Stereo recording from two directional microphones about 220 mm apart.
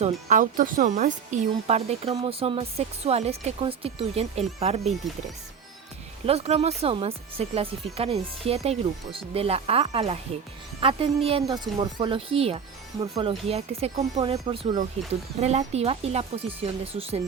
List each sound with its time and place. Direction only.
0.0 s speech: 35° right (ahead or behind)
5.0 s speech: centre (ahead or behind)
6.2 s speech: 30° right (ahead or behind)